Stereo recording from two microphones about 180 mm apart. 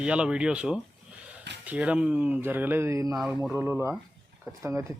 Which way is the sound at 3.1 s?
5° right (ahead or behind).